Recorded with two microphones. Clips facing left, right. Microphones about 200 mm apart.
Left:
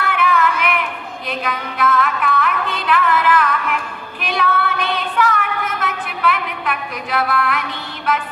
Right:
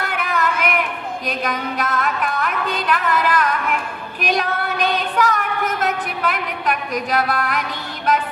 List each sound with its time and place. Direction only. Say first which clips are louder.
0.0 s child singing: left 4 dB; 40° right (ahead or behind)
1.3 s music: even; 40° right (ahead or behind)
4.2 s child singing: left 1 dB; 40° right (ahead or behind)